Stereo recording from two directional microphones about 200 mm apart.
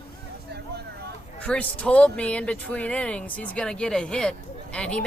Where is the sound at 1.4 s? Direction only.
5° left (ahead or behind).